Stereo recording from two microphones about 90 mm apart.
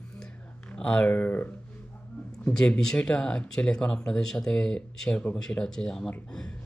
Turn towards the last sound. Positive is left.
turn(degrees=10)  # may be behind; listen again after turning